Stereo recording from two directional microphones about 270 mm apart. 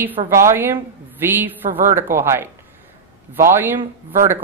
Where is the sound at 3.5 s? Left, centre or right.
Centre.